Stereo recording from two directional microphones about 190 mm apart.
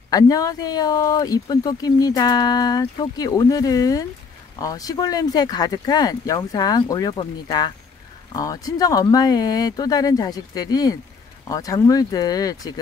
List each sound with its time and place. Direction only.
0.1 s speech: 20° left (ahead or behind)